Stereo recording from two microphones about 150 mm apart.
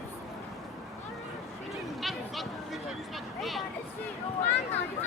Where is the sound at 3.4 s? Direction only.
Centre (ahead or behind).